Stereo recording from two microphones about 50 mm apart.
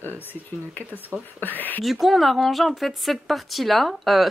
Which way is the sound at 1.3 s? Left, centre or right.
Left.